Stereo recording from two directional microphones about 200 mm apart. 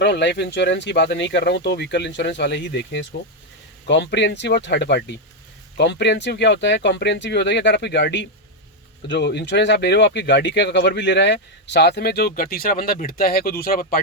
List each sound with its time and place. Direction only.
0.0 s speech: 60° left (ahead or behind)